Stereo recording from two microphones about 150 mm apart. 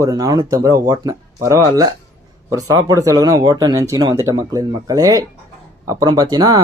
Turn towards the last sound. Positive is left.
turn(degrees=-25)  # may be behind; listen again after turning